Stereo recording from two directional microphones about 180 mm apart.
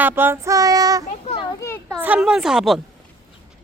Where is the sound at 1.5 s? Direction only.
15° left (ahead or behind).